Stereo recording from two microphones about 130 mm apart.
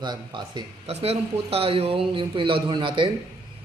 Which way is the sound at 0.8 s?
50° right (ahead or behind).